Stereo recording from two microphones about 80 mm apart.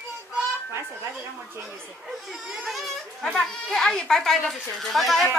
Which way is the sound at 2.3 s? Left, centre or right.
Centre.